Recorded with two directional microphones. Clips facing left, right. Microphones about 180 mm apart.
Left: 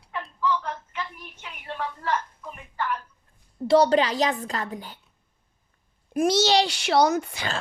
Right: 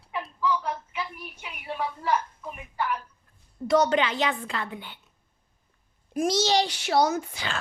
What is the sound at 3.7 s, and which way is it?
A woman's voice, 30° left (ahead or behind).